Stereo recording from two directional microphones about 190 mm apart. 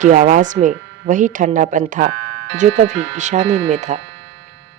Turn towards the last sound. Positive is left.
turn(degrees=-40)  # may be behind; listen again after turning